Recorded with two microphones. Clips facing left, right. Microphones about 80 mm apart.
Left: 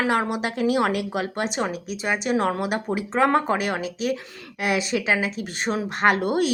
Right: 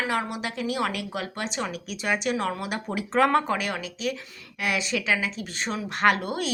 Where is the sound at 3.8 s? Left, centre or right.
Left.